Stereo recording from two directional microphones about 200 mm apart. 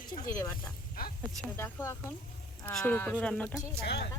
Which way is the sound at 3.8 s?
55° left (ahead or behind).